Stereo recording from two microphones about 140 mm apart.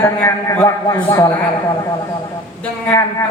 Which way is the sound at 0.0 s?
15° left (ahead or behind).